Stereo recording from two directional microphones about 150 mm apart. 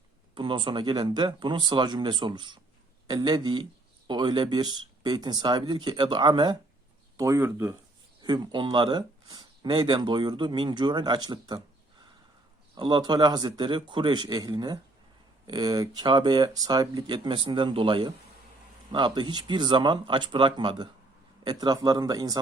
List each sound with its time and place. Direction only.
0.3 s speech: 35° right (ahead or behind)
7.2 s speech: 20° right (ahead or behind)
8.2 s speech: 30° right (ahead or behind)
12.7 s speech: 30° right (ahead or behind)